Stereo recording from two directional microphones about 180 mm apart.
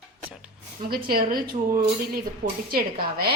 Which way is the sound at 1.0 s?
55° right (ahead or behind).